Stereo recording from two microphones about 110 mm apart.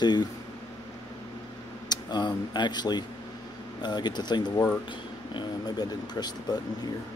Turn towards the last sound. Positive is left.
turn(degrees=40)  # may be behind; listen again after turning